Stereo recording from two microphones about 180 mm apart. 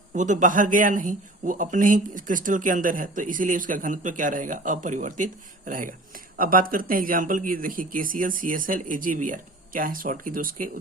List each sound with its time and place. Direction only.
0.1 s a man's voice: 45° right (ahead or behind)